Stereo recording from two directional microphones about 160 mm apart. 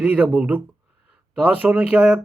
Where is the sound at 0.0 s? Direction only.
5° right (ahead or behind).